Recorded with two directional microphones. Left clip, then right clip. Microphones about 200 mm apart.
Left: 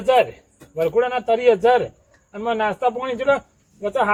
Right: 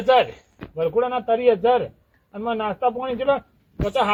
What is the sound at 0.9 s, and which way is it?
Speech, 25° left (ahead or behind).